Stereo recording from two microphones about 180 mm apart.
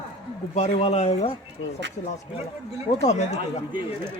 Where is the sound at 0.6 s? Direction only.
35° left (ahead or behind).